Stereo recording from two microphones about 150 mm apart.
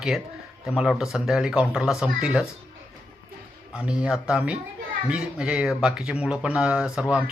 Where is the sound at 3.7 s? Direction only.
5° right (ahead or behind).